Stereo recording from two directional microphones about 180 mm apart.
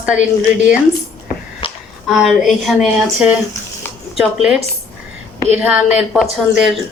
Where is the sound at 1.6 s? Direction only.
30° left (ahead or behind).